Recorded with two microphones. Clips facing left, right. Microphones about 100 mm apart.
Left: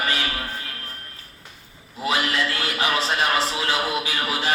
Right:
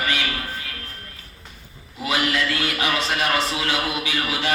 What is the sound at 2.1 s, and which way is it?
A man's voice, 35° left (ahead or behind).